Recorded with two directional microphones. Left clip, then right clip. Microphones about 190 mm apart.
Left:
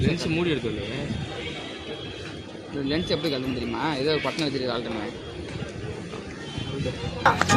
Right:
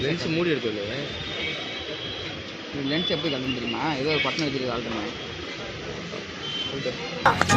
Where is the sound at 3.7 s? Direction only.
5° left (ahead or behind).